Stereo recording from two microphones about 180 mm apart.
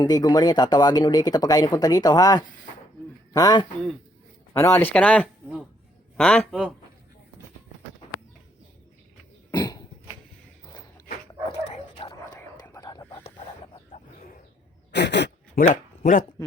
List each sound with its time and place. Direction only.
0.0 s speech: 20° left (ahead or behind); by 6.7 s 5° right (ahead or behind)
9.5 s cough: 20° left (ahead or behind)
11.7 s dog: 25° left (ahead or behind)
12.6 s whispering: 20° left (ahead or behind)
14.9 s a sound: 70° left (ahead or behind)
15.7 s a sound: 50° left (ahead or behind)